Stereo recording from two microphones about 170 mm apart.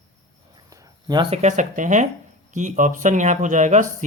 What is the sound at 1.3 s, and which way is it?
Speech, 45° right (ahead or behind).